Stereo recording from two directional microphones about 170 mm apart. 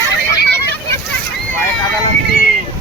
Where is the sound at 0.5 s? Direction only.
15° left (ahead or behind).